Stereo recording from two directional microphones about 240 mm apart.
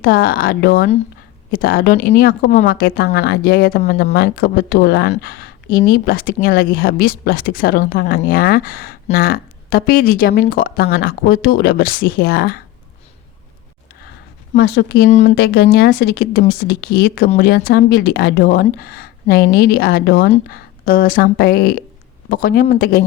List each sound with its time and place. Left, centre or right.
0.0 s speech: left
14.5 s speech: left